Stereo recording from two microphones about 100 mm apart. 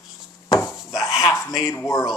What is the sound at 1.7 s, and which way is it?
Speech, 35° left (ahead or behind).